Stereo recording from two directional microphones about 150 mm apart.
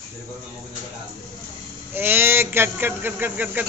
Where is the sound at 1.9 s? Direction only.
15° right (ahead or behind).